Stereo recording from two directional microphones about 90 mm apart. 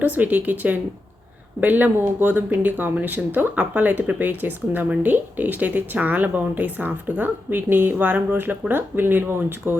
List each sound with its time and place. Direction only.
0.0 s speech: 20° right (ahead or behind)